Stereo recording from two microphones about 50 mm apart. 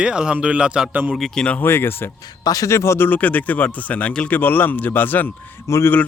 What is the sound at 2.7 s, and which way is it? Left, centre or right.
Speech, left.